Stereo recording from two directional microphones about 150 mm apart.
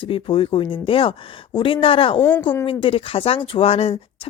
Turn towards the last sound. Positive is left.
turn(degrees=40)  # may be behind; listen again after turning